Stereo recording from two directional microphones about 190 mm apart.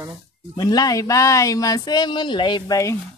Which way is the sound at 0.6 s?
20° left (ahead or behind).